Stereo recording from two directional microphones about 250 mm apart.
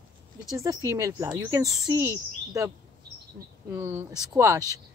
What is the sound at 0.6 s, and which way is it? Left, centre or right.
Speech, centre.